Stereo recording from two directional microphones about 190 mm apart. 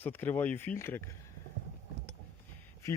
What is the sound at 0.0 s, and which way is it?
Speech, 10° left (ahead or behind).